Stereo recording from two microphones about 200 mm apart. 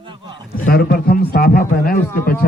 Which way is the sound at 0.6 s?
50° left (ahead or behind).